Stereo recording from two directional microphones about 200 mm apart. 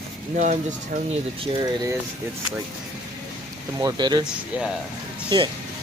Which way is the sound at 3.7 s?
20° right (ahead or behind).